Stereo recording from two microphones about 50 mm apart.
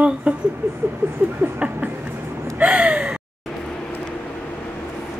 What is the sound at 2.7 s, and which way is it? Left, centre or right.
Gasp, centre.